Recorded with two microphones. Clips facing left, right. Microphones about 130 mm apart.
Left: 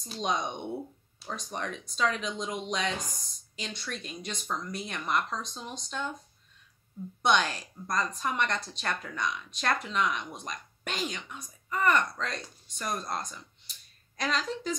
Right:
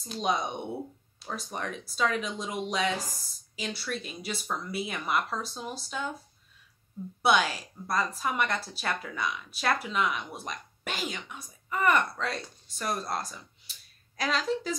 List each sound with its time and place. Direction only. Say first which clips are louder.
0.0 s a woman's voice: right 2 dB; 5° right (ahead or behind)